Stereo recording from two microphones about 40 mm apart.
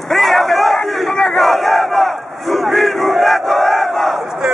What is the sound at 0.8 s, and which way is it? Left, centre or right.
Battle cry, centre.